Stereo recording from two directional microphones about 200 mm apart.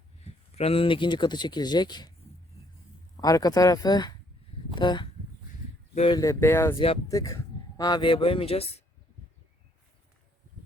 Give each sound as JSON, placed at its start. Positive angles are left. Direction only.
{"t": 0.5, "sound": "speech", "side_deg": 30}
{"t": 3.2, "sound": "speech", "side_deg": 20}
{"t": 6.1, "sound": "speech", "side_deg": 15}
{"t": 6.7, "sound": "speech", "side_deg": 25}